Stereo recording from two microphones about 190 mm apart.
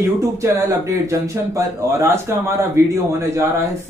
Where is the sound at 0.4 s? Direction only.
15° right (ahead or behind).